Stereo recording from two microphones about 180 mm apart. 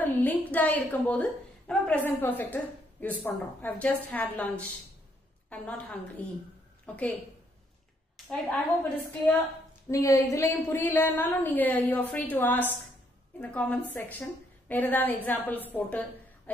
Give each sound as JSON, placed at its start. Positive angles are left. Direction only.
{"t": 0.0, "sound": "a woman's voice", "side_deg": 10}
{"t": 8.3, "sound": "a woman's voice", "side_deg": 10}
{"t": 16.5, "sound": "a sound", "side_deg": 10}